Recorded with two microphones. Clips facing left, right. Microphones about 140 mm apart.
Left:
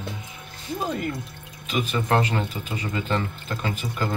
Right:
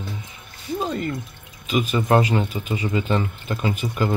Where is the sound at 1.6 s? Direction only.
5° right (ahead or behind).